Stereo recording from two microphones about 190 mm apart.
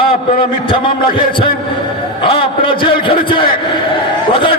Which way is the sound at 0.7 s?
25° left (ahead or behind).